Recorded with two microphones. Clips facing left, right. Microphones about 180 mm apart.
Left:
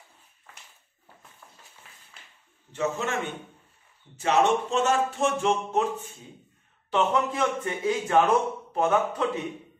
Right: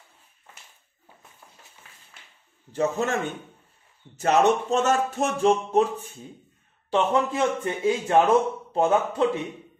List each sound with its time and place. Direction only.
2.7 s speech: 35° right (ahead or behind)
4.2 s speech: 40° right (ahead or behind)
6.9 s a man's voice: 30° right (ahead or behind)